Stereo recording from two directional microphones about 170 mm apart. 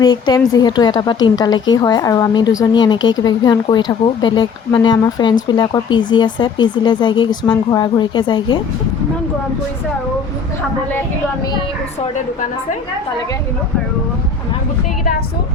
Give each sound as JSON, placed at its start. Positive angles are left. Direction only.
{"t": 0.0, "sound": "a woman's voice", "side_deg": 25}